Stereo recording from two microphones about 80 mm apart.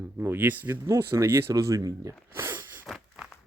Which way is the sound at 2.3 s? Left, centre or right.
Right.